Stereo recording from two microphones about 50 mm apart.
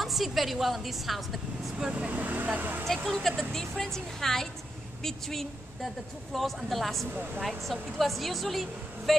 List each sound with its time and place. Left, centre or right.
0.0 s a woman's voice: centre
1.9 s speech: centre
2.1 s speech: right
3.1 s a woman's voice: centre